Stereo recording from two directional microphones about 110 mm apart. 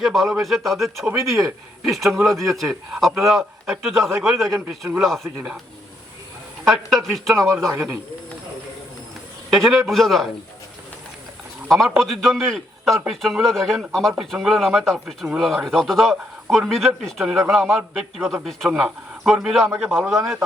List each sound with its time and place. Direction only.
0.0 s speech: centre (ahead or behind)
4.4 s a man's voice: 25° right (ahead or behind)
4.9 s speech: centre (ahead or behind)
6.7 s speech: centre (ahead or behind)
7.7 s a man's voice: 20° right (ahead or behind)
9.6 s speech: centre (ahead or behind)
11.7 s speech: centre (ahead or behind)